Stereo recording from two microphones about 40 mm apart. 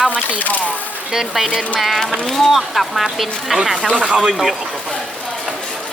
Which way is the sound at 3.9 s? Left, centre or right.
Right.